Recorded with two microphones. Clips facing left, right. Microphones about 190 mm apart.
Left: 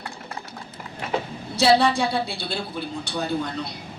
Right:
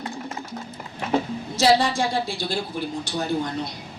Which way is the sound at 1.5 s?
65° left (ahead or behind).